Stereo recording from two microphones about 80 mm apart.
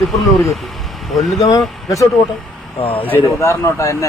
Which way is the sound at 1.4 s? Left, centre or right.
Left.